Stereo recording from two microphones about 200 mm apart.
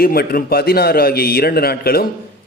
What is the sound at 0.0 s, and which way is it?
A man's voice, 50° left (ahead or behind).